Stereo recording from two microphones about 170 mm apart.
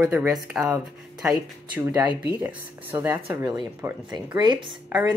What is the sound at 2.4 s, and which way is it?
Speech, 10° right (ahead or behind).